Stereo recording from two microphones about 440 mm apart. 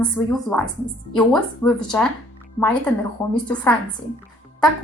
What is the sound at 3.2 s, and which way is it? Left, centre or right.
Speech, centre.